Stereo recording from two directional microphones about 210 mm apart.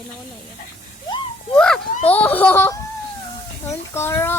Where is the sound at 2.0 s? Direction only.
5° left (ahead or behind).